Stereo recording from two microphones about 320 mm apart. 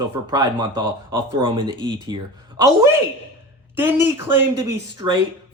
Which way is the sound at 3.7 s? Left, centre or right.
Centre.